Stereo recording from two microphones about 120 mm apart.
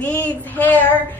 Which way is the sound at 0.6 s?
15° left (ahead or behind).